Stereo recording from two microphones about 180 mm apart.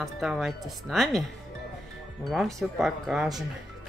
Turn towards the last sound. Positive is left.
turn(degrees=0)  # may be behind; listen again after turning